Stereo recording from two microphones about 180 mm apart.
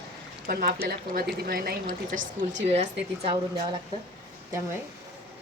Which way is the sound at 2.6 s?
35° right (ahead or behind).